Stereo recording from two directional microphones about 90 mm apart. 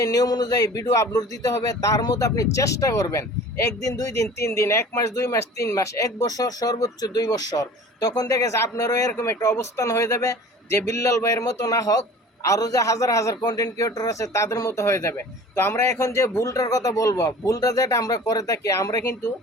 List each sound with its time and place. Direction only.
0.0 s speech: 45° left (ahead or behind)